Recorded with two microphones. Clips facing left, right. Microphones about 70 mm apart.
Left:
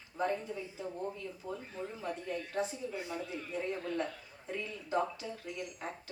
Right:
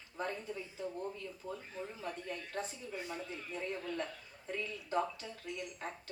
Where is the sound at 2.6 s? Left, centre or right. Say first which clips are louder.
Left 6 dB; centre.